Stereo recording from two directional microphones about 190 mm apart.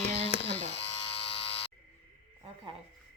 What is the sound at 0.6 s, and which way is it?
Electric shaver, 30° left (ahead or behind).